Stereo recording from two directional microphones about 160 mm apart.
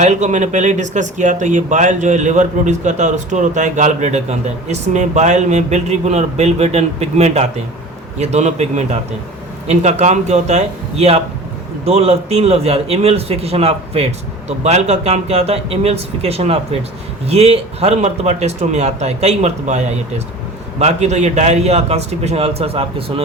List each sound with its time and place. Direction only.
0.0 s a man's voice: 50° right (ahead or behind)